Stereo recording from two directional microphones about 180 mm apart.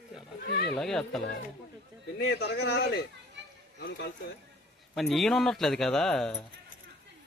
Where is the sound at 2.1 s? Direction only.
65° left (ahead or behind).